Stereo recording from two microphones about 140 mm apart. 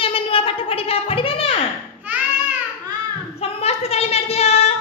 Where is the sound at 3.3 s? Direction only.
45° left (ahead or behind).